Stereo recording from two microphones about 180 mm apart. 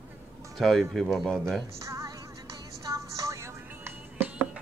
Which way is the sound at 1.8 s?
15° right (ahead or behind).